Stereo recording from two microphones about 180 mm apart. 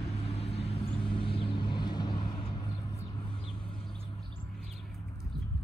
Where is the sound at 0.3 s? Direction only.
35° left (ahead or behind).